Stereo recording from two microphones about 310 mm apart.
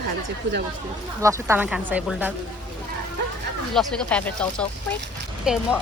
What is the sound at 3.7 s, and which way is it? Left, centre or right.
Speech, centre.